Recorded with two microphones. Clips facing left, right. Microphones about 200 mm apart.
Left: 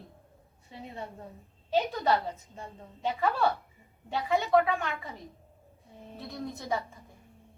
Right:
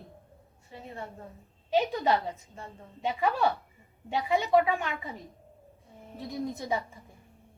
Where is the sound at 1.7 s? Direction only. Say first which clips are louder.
Right 1 dB; 15° right (ahead or behind).